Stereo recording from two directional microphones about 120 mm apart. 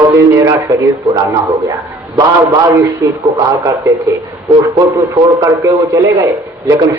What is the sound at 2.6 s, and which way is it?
A man's voice, 25° right (ahead or behind).